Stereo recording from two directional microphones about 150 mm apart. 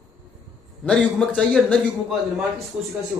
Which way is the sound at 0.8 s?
5° left (ahead or behind).